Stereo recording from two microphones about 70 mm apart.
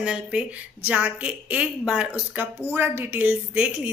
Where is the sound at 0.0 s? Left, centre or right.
Centre.